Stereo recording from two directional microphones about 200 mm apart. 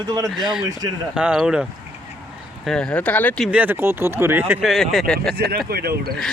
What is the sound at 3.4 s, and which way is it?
Speech, 10° right (ahead or behind).